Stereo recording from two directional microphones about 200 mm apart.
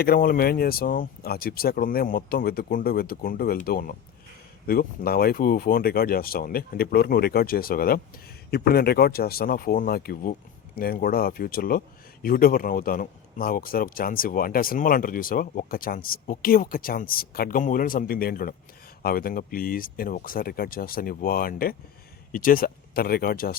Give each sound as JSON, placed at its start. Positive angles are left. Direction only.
{"t": 0.0, "sound": "speech", "side_deg": 45}